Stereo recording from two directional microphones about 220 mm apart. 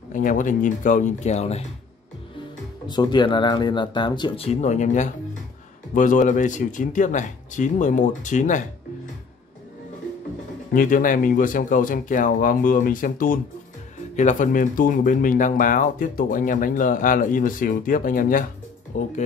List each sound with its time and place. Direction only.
0.1 s speech: 35° left (ahead or behind)
2.9 s speech: 20° left (ahead or behind); by 8.6 s 35° left (ahead or behind)
10.7 s speech: 40° left (ahead or behind)